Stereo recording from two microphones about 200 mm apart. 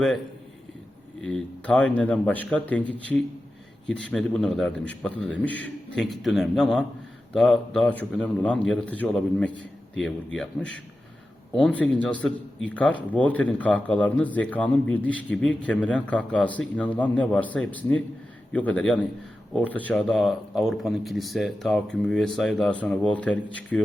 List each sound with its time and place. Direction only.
1.2 s a man's voice: 5° left (ahead or behind)